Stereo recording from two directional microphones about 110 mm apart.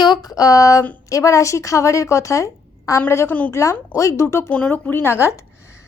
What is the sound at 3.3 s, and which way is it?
Speech, 15° left (ahead or behind).